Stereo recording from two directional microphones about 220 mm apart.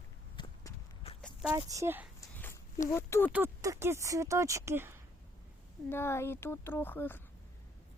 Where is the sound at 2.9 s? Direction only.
10° left (ahead or behind).